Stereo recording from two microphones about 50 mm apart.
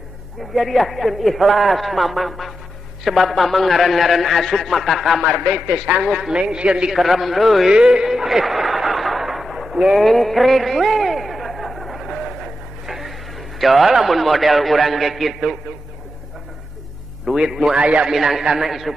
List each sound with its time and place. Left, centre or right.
0.6 s a man's voice: centre
6.3 s a man's voice: centre
6.9 s a man's voice: centre
7.7 s a sound: centre
13.6 s a man's voice: centre
17.4 s a man's voice: centre
17.7 s a man's voice: right
18.1 s a man's voice: centre